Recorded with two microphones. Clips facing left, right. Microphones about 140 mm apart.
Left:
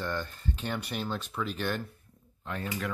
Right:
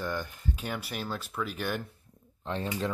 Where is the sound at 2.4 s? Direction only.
25° right (ahead or behind).